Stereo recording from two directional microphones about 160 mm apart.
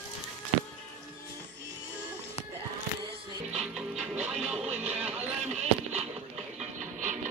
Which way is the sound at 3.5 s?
5° right (ahead or behind).